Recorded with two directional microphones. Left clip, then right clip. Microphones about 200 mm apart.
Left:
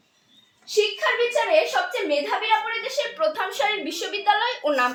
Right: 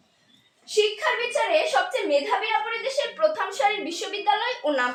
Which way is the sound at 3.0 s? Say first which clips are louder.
Right 1 dB; 20° left (ahead or behind).